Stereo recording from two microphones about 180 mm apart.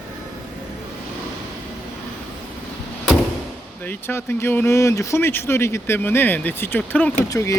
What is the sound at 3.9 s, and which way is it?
Speech, 10° left (ahead or behind).